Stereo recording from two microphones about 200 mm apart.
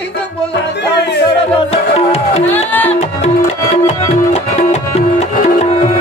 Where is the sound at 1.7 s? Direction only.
30° left (ahead or behind).